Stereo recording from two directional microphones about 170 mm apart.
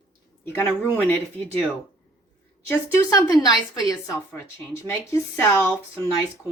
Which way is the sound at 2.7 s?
20° left (ahead or behind).